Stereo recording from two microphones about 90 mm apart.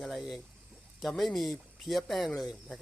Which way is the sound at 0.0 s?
Centre (ahead or behind).